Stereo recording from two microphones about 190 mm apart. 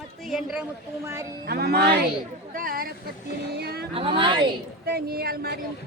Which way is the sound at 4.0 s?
30° right (ahead or behind).